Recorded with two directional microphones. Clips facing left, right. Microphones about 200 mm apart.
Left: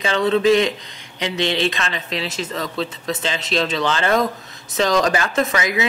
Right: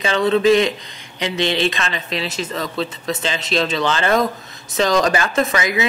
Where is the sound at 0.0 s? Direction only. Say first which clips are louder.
Right 1 dB; 15° right (ahead or behind).